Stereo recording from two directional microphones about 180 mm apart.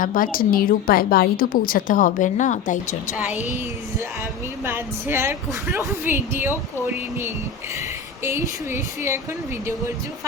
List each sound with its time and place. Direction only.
0.0 s a woman's voice: 50° left (ahead or behind)
4.6 s a woman's voice: 15° right (ahead or behind)
8.2 s a woman's voice: 15° right (ahead or behind)